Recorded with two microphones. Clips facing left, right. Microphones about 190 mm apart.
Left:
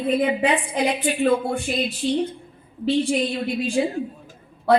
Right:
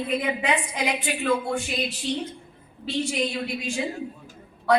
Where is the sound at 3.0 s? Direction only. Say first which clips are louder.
Left 5 dB; 30° left (ahead or behind).